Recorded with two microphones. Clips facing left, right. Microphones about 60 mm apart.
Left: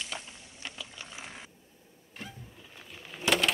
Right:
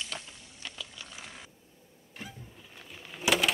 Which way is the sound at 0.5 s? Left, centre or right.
Left.